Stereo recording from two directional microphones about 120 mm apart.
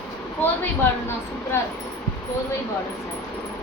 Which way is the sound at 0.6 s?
20° left (ahead or behind).